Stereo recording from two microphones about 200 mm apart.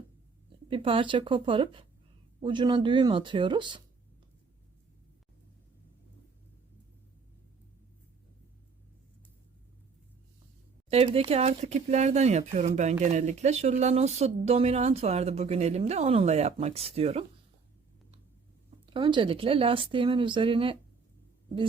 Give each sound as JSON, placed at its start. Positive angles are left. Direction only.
{"t": 0.7, "sound": "speech", "side_deg": -25}
{"t": 10.8, "sound": "speech", "side_deg": -30}
{"t": 18.9, "sound": "speech", "side_deg": -25}